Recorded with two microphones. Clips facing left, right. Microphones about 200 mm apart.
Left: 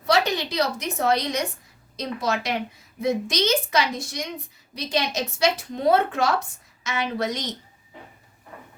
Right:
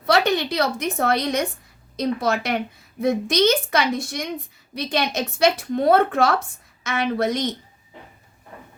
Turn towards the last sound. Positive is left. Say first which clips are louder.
# right 5 dB
turn(degrees=-55)  # may be behind; listen again after turning